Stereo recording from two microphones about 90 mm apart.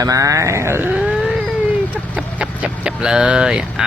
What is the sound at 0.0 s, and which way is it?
Speech, 40° right (ahead or behind).